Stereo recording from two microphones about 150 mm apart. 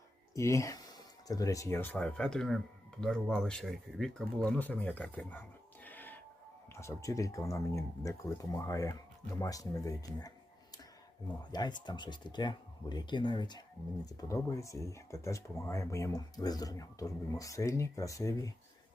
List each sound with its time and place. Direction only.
0.3 s speech: 20° left (ahead or behind)
11.5 s speech: 30° left (ahead or behind)